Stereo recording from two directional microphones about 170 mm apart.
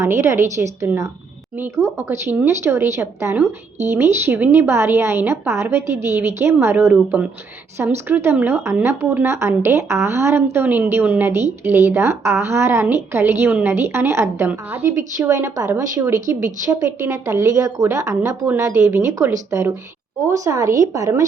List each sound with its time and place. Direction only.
0.0 s a woman's voice: 15° right (ahead or behind)